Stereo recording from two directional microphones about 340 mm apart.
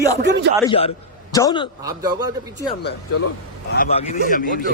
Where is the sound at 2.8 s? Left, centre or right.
Left.